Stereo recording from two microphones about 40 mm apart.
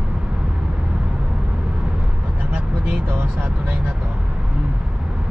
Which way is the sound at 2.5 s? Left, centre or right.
Right.